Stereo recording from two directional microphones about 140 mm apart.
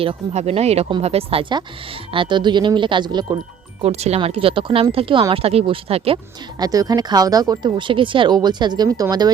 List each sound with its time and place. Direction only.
0.0 s speech: 45° right (ahead or behind)
3.8 s speech: 50° right (ahead or behind)
6.6 s speech: 25° right (ahead or behind)